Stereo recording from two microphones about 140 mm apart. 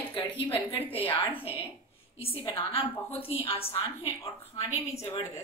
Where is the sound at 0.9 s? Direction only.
35° left (ahead or behind).